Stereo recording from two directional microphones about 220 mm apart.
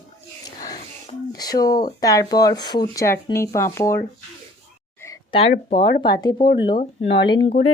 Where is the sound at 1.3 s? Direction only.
15° left (ahead or behind).